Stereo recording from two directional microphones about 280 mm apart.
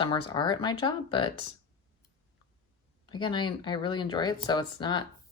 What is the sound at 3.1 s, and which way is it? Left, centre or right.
Speech, centre.